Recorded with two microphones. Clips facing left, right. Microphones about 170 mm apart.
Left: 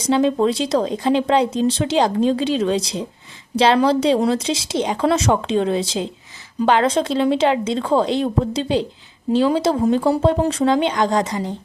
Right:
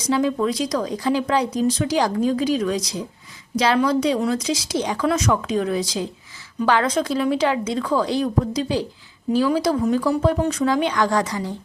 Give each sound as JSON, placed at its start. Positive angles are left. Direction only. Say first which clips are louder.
{"t": 0.0, "sound": "speech", "louder": "left 4 dB", "side_deg": 25}